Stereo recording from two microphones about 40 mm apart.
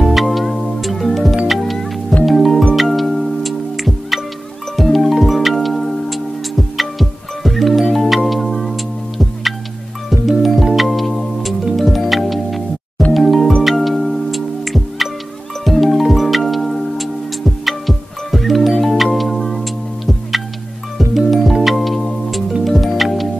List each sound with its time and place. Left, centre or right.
0.0 s music: centre
10.0 s music: centre